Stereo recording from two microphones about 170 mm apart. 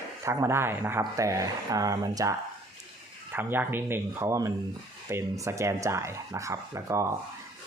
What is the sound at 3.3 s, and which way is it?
Speech, 10° right (ahead or behind).